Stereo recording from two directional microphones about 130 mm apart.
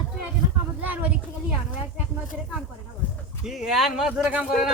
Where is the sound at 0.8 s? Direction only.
10° right (ahead or behind).